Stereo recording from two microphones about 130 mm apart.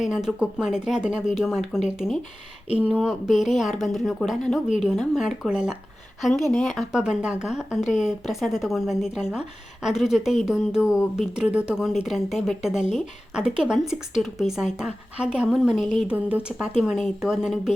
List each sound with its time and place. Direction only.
0.0 s speech: 5° right (ahead or behind)